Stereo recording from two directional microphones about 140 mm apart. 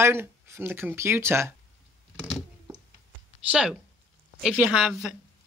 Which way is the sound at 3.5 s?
5° right (ahead or behind).